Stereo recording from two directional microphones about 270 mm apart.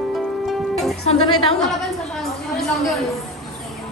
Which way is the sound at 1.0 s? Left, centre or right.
Left.